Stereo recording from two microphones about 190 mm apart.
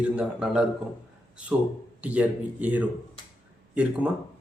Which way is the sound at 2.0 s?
5° right (ahead or behind).